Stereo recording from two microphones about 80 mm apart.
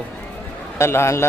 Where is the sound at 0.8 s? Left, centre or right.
Left.